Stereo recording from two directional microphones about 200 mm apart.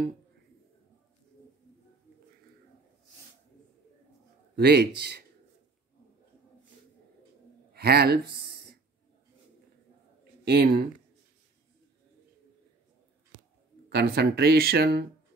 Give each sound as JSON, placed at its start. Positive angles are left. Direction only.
{"t": 4.6, "sound": "speech", "side_deg": -55}
{"t": 7.7, "sound": "speech", "side_deg": -50}
{"t": 10.4, "sound": "speech", "side_deg": -55}
{"t": 13.8, "sound": "speech", "side_deg": -50}